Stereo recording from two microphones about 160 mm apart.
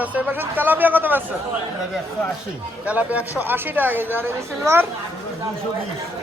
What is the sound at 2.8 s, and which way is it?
Speech, 10° right (ahead or behind).